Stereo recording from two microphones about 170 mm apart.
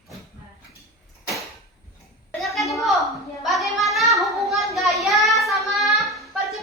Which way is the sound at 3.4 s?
Centre (ahead or behind).